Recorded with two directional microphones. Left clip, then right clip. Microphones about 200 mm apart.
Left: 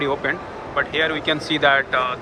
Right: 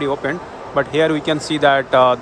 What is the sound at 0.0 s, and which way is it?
Speech, 15° right (ahead or behind).